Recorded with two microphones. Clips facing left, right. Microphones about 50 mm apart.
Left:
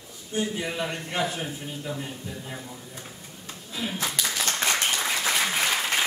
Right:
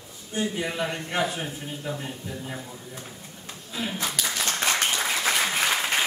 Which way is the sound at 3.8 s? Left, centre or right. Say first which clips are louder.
Even; centre.